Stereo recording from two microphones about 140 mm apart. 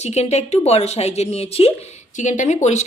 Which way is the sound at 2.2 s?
60° left (ahead or behind).